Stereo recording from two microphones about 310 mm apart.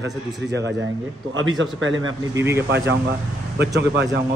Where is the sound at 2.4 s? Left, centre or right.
Centre.